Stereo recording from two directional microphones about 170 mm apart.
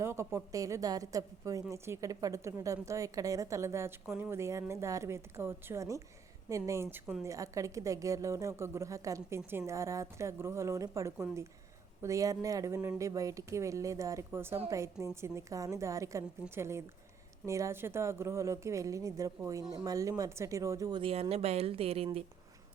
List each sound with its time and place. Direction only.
0.0 s a woman's voice: 15° right (ahead or behind); by 22.2 s 35° right (ahead or behind)